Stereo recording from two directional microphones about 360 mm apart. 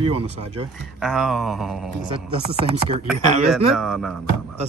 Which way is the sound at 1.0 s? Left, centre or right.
Centre.